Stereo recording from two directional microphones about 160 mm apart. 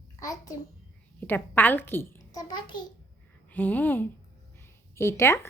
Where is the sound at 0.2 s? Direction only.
20° left (ahead or behind).